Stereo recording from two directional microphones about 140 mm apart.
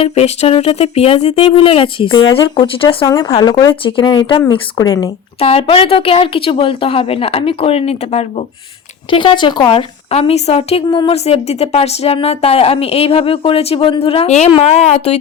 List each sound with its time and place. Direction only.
0.0 s a woman's voice: 45° left (ahead or behind); by 5.1 s 25° left (ahead or behind)
5.4 s a woman's voice: 45° left (ahead or behind)
9.0 s speech: 35° left (ahead or behind)